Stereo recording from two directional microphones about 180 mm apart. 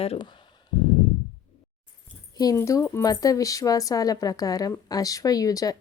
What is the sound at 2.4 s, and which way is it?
A woman's voice, 20° left (ahead or behind).